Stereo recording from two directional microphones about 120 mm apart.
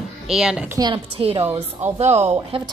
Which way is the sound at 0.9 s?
50° right (ahead or behind).